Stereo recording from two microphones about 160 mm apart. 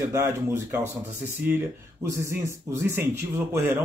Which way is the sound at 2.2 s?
15° right (ahead or behind).